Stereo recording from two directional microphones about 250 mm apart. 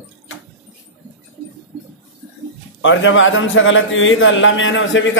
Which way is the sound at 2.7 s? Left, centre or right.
Left.